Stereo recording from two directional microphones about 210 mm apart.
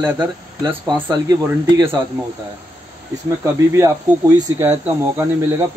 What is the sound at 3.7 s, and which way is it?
Speech, 15° right (ahead or behind).